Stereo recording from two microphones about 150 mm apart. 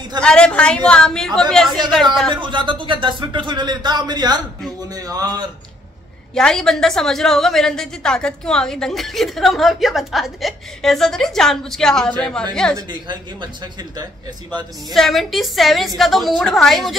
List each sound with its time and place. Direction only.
0.2 s a woman's voice: 5° left (ahead or behind)
2.3 s speech: 35° right (ahead or behind)
6.3 s a woman's voice: 5° left (ahead or behind)
12.7 s speech: 30° right (ahead or behind)
14.9 s a woman's voice: centre (ahead or behind)